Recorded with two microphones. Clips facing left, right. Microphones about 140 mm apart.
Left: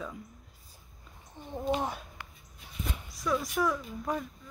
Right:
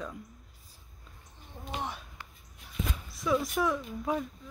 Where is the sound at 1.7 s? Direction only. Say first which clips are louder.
Left 4 dB; 45° left (ahead or behind).